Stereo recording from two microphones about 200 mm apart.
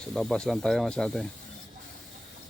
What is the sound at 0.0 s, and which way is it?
Speech, 5° left (ahead or behind).